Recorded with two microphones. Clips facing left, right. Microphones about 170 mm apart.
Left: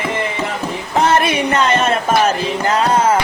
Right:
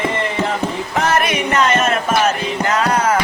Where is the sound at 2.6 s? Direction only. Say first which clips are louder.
Left 2 dB; 30° left (ahead or behind).